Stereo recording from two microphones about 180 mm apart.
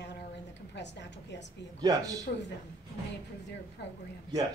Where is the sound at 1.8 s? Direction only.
20° right (ahead or behind).